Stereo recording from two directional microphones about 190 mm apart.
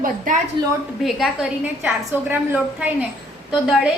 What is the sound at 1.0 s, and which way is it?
A woman's voice, centre (ahead or behind).